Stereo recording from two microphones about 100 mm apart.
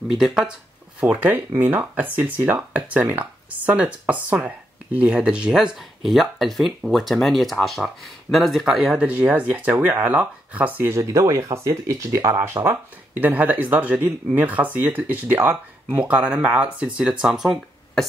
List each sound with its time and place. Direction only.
0.1 s speech: 5° right (ahead or behind)
9.0 s speech: 15° right (ahead or behind)
11.0 s speech: 30° right (ahead or behind); by 18.0 s 5° right (ahead or behind)